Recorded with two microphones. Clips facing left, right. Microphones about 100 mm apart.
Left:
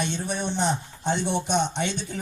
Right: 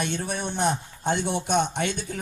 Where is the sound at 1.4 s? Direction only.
50° right (ahead or behind).